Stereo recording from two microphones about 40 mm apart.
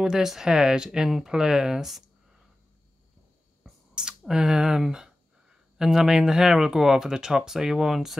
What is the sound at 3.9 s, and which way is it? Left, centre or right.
Speech, centre.